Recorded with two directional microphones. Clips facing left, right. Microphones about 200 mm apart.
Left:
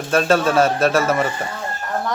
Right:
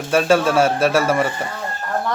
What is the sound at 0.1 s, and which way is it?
A man's voice, 10° right (ahead or behind).